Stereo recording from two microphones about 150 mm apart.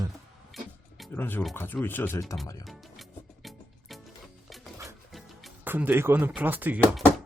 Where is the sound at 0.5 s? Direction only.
Centre (ahead or behind).